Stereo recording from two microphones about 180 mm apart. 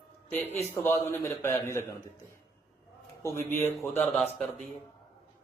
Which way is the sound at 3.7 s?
Centre (ahead or behind).